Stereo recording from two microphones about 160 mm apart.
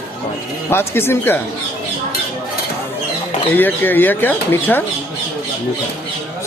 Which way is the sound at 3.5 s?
10° left (ahead or behind).